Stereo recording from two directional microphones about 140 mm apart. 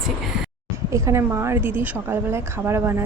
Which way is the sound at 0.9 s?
20° right (ahead or behind).